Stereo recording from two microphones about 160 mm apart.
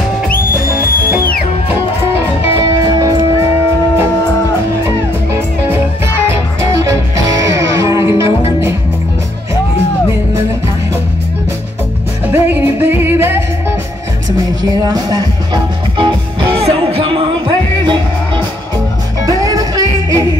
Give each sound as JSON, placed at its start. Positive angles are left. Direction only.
{"t": 6.7, "sound": "music", "side_deg": -20}
{"t": 12.3, "sound": "music", "side_deg": -15}
{"t": 14.6, "sound": "music", "side_deg": -25}